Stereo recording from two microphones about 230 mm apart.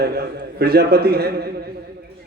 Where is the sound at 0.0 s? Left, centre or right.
Right.